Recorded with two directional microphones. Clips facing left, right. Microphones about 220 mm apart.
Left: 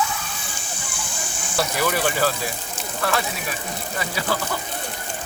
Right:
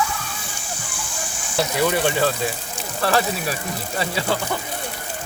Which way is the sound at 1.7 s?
25° right (ahead or behind).